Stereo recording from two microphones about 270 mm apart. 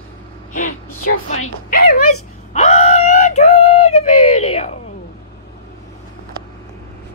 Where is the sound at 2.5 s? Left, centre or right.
Left.